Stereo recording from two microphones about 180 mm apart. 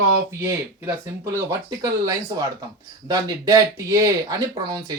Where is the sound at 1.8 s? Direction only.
20° right (ahead or behind).